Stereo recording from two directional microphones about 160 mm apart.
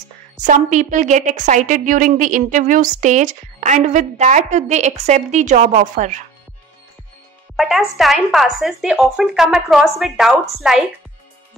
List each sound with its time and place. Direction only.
0.4 s a woman's voice: 50° right (ahead or behind)
7.5 s speech: centre (ahead or behind)